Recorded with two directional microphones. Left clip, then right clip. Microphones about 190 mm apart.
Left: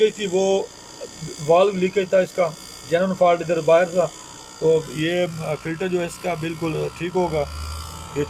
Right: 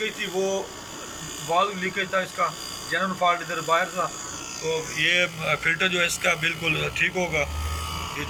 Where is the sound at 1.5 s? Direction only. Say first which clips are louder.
Left 6 dB; 65° left (ahead or behind).